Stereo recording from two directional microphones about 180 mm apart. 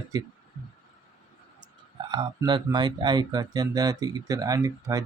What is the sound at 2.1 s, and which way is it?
Speech, 25° right (ahead or behind).